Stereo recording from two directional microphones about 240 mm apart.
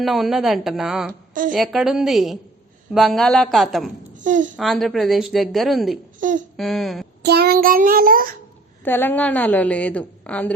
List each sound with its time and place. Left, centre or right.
0.0 s speech: centre
1.3 s a woman's voice: right
1.5 s speech: centre
4.2 s speech: right
4.5 s speech: centre
6.1 s speech: right
6.6 s speech: centre
7.2 s a child's voice: right
8.8 s a woman's voice: centre